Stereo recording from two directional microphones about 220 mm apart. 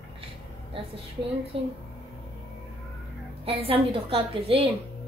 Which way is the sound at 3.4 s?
25° right (ahead or behind).